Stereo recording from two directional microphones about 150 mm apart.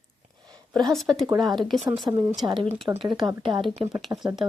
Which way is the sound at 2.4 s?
35° right (ahead or behind).